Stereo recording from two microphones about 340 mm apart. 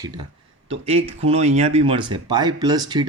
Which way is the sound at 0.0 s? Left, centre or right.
Centre.